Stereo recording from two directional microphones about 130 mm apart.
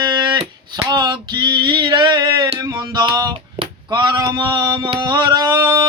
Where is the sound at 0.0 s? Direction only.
35° right (ahead or behind).